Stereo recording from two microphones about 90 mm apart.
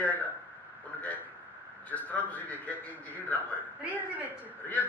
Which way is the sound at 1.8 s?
15° left (ahead or behind).